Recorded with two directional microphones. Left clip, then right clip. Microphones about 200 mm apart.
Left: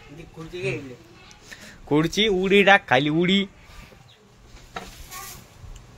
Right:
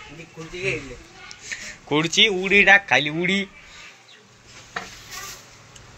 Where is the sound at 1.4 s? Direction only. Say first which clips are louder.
Right 10 dB; 35° left (ahead or behind).